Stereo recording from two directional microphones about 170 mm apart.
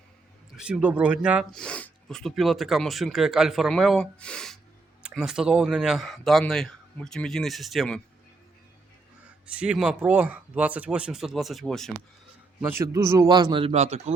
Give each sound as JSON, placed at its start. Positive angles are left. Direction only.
{"t": 0.5, "sound": "speech", "side_deg": -5}
{"t": 9.6, "sound": "speech", "side_deg": -5}
{"t": 12.6, "sound": "a man's voice", "side_deg": -20}